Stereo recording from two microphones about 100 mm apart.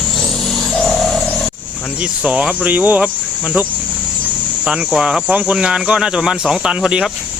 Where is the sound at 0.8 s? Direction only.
Centre (ahead or behind).